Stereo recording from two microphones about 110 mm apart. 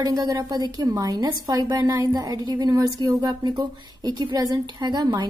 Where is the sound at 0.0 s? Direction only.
35° right (ahead or behind).